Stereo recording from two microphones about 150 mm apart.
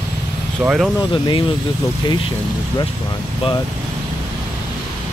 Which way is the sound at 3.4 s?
40° left (ahead or behind).